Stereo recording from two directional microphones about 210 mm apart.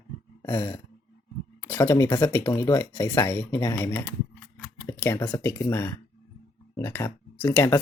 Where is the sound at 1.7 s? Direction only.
15° left (ahead or behind).